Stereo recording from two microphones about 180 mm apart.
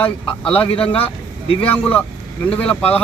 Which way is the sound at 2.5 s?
5° left (ahead or behind).